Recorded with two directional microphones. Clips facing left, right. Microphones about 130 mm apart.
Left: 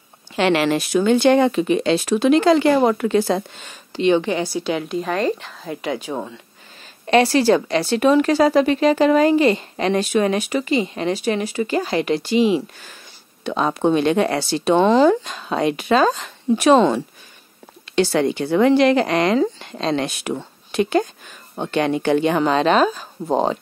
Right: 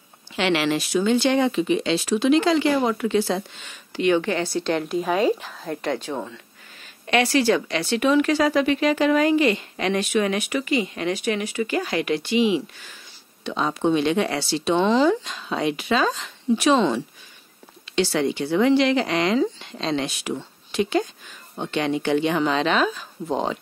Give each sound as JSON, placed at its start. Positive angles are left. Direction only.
{"t": 0.4, "sound": "speech", "side_deg": 45}
{"t": 3.9, "sound": "a woman's voice", "side_deg": 25}
{"t": 7.1, "sound": "speech", "side_deg": 35}
{"t": 13.4, "sound": "speech", "side_deg": 55}